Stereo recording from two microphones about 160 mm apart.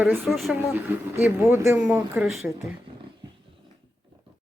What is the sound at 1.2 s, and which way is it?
Speech, 15° right (ahead or behind).